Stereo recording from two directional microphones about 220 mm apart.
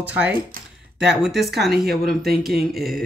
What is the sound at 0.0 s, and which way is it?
Speech, 5° right (ahead or behind).